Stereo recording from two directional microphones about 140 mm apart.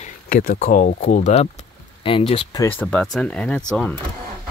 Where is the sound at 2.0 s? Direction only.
40° left (ahead or behind).